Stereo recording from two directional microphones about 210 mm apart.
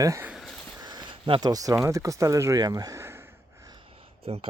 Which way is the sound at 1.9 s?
15° right (ahead or behind).